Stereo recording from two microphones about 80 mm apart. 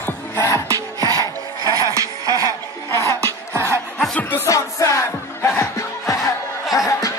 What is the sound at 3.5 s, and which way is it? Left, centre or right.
Music, right.